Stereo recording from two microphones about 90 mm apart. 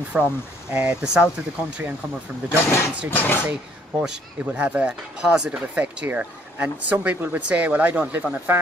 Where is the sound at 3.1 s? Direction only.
20° left (ahead or behind).